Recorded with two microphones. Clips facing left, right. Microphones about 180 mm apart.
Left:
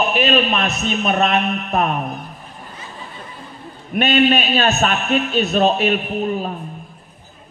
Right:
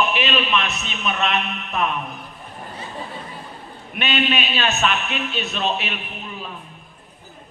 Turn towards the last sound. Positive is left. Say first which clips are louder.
# left 13 dB
turn(degrees=45)  # may be behind; listen again after turning